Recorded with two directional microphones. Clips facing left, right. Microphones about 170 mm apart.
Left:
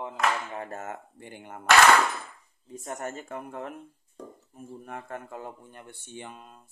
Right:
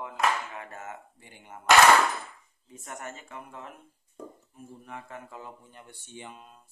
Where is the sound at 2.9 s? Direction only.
40° left (ahead or behind).